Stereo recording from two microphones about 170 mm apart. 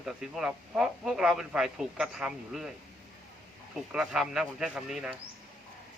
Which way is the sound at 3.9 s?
5° right (ahead or behind).